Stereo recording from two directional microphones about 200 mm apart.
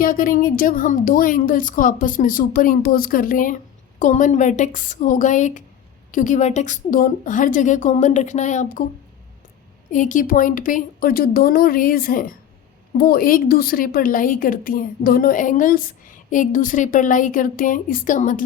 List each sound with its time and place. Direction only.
0.0 s a woman's voice: 45° left (ahead or behind)
9.9 s a woman's voice: 40° left (ahead or behind)